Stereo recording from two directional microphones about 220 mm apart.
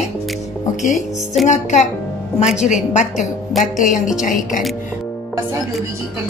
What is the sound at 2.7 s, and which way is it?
A woman's voice, 30° left (ahead or behind).